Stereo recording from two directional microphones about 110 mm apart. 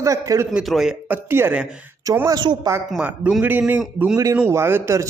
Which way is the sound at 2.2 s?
40° right (ahead or behind).